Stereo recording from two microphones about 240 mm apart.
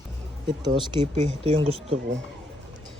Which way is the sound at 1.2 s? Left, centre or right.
Right.